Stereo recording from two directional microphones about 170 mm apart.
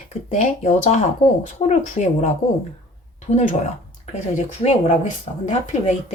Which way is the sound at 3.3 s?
45° left (ahead or behind).